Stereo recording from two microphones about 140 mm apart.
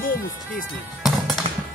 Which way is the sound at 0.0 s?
80° left.